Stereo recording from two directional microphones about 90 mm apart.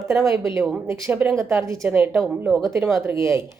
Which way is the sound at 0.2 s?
35° right (ahead or behind).